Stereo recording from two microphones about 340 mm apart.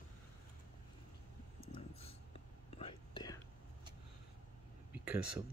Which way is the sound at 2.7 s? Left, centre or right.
Centre.